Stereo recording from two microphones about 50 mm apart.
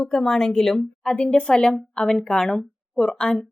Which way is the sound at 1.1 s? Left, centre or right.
Left.